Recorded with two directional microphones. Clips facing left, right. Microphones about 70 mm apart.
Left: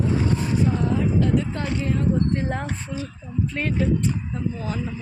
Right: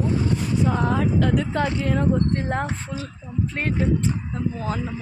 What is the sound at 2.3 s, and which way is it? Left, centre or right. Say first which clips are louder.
Speech: right 1 dB; right.